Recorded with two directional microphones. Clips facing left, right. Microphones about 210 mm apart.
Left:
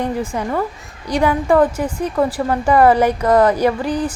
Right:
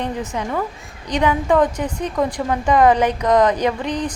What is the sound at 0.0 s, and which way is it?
Speech, 10° left (ahead or behind).